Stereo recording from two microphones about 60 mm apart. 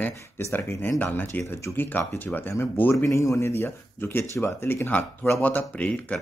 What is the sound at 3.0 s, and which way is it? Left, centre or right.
Speech, left.